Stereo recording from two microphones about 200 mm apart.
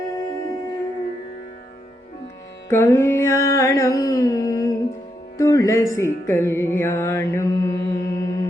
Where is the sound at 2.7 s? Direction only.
10° left (ahead or behind).